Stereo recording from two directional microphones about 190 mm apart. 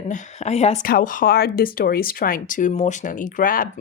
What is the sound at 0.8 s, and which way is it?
Speech, 45° left (ahead or behind).